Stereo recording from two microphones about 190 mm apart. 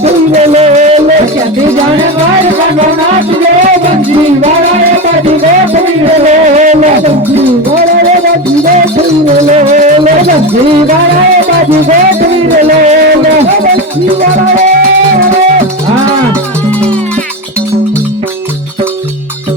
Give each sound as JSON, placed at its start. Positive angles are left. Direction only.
{"t": 0.0, "sound": "music", "side_deg": -35}
{"t": 6.2, "sound": "music", "side_deg": -40}
{"t": 9.2, "sound": "music", "side_deg": -40}